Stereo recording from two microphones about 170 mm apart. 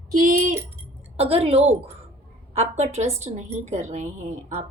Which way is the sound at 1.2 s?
35° right (ahead or behind).